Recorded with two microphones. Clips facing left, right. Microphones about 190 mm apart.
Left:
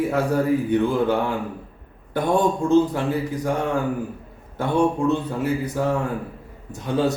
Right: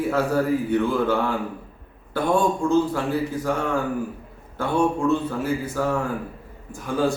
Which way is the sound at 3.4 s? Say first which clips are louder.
Left 1 dB; 15° left (ahead or behind).